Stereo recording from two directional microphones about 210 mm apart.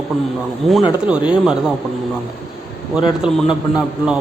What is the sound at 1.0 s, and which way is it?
Speech, 5° right (ahead or behind).